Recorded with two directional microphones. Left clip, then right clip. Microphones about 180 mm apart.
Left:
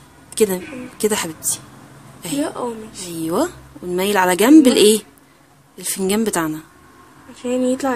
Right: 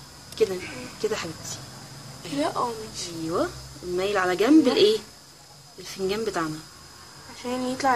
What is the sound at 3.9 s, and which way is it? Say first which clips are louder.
A woman's voice: left 7 dB; 60° left (ahead or behind).